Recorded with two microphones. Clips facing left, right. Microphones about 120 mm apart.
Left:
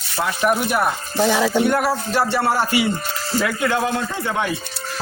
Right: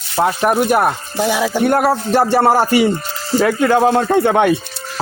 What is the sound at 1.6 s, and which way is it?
Music, 50° right (ahead or behind).